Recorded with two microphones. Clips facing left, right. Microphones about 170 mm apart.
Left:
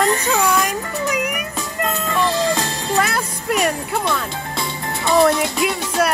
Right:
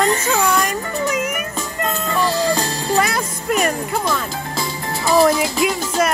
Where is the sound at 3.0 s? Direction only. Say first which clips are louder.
Right 1 dB; 5° left (ahead or behind).